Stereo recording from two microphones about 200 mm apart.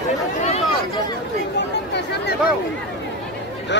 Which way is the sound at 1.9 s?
55° left (ahead or behind).